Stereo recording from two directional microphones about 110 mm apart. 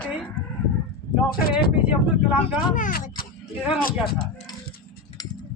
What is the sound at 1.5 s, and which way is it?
Speech, 10° right (ahead or behind).